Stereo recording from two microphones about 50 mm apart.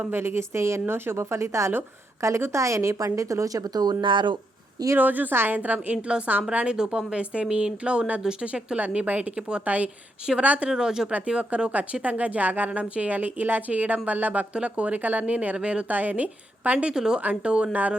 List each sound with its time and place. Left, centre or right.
0.0 s a woman's voice: right
4.9 s speech: right
5.5 s speech: right
6.1 s a woman's voice: centre
6.7 s a woman's voice: centre
8.2 s a woman's voice: centre
8.4 s a woman's voice: right
10.7 s a woman's voice: centre
11.7 s a woman's voice: right
15.9 s speech: right
16.9 s a woman's voice: centre
17.2 s a woman's voice: right